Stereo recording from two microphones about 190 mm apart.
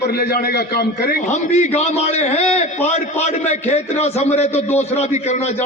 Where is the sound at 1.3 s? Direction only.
35° left (ahead or behind).